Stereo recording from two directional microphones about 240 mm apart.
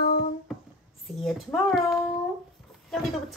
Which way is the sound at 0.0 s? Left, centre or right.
Left.